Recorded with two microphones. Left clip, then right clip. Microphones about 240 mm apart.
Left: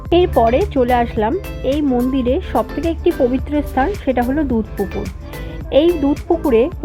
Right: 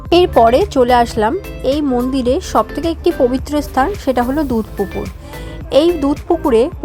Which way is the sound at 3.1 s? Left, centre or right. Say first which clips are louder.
Right 2 dB; centre.